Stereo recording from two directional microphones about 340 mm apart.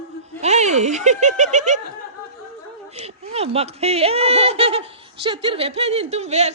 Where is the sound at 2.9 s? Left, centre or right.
Centre.